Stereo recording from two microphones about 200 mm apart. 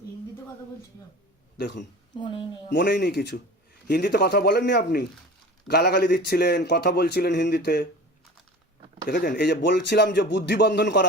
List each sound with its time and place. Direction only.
1.5 s speech: 55° left (ahead or behind)
2.1 s speech: 20° left (ahead or behind)
2.6 s speech: 60° left (ahead or behind)
9.0 s speech: 50° left (ahead or behind)